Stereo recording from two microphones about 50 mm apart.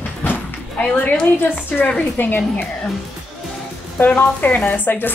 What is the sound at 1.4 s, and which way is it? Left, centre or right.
Speech, left.